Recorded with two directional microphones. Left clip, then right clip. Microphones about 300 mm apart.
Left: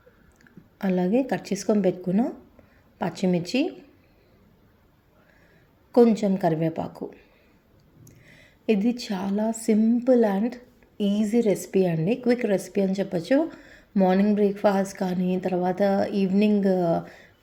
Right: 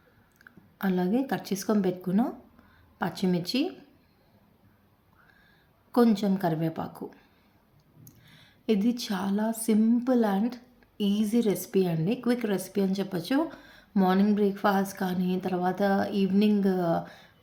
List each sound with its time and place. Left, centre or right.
0.8 s a woman's voice: centre
5.9 s a woman's voice: centre